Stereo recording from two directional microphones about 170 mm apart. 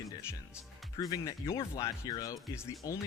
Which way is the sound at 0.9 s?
20° left (ahead or behind).